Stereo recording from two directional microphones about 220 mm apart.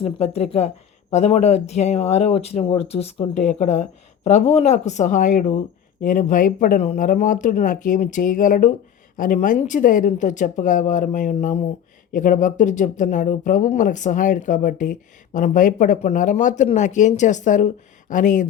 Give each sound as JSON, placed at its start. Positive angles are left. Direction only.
{"t": 0.0, "sound": "speech", "side_deg": 30}